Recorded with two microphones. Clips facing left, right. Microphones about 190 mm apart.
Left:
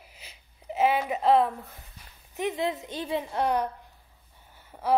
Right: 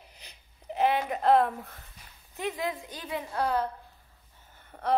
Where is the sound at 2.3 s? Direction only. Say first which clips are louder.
Left 4 dB; 20° left (ahead or behind).